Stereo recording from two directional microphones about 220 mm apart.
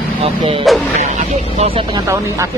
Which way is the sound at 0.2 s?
25° right (ahead or behind).